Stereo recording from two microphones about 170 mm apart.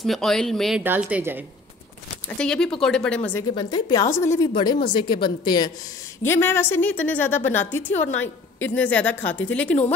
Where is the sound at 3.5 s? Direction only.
25° left (ahead or behind).